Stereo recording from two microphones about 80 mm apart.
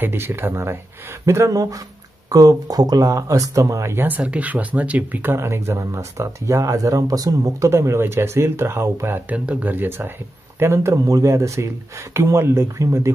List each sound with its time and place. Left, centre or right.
0.0 s speech: right
3.9 s speech: right
9.3 s speech: centre; by 13.1 s right